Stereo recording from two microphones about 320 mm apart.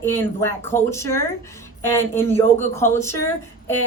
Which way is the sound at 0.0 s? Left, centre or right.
Centre.